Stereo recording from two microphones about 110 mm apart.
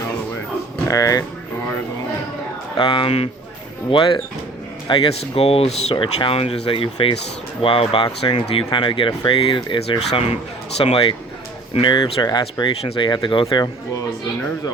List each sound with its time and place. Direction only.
0.9 s speech: 30° left (ahead or behind)
2.7 s speech: 45° left (ahead or behind)
3.9 s speech: 45° left (ahead or behind)
4.9 s speech: 60° left (ahead or behind)
10.1 s speech: 70° left (ahead or behind)
11.7 s speech: 50° left (ahead or behind)